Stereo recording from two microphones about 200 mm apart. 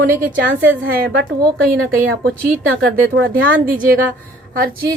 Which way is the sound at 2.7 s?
75° right (ahead or behind).